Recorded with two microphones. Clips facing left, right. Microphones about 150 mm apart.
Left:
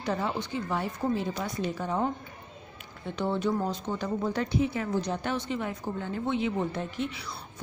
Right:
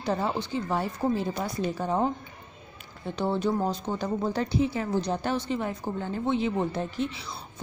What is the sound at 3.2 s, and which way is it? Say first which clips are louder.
Speech: right 2 dB; 35° right (ahead or behind).